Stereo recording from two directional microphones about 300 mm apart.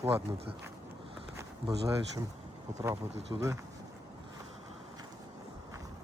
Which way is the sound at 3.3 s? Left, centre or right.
Centre.